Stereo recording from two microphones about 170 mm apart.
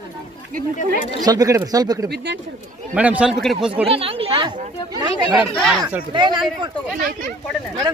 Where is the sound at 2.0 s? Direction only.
75° right (ahead or behind).